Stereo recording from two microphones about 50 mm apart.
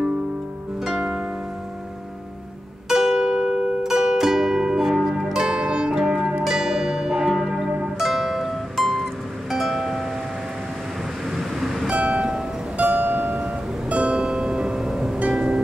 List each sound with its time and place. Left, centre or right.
2.9 s zither: centre
6.4 s music: centre
11.2 s vehicle: centre
11.9 s music: right
13.3 s music: right; by 15.1 s centre
15.1 s music: right